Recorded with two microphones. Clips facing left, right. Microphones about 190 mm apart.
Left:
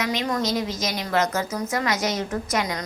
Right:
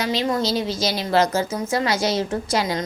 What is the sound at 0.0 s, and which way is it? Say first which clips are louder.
A woman's voice: right 3 dB; 30° right (ahead or behind).